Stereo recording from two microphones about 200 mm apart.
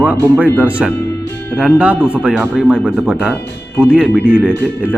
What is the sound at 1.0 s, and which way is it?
Music, 15° left (ahead or behind).